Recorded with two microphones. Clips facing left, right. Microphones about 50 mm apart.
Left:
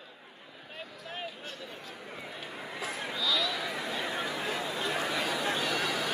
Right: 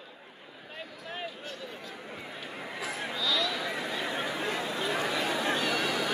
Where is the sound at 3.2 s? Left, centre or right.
Centre.